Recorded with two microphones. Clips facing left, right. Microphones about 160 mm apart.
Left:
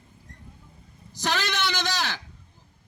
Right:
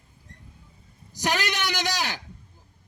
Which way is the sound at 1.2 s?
15° right (ahead or behind).